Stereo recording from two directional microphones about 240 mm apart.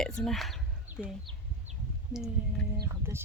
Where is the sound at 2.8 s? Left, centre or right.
Centre.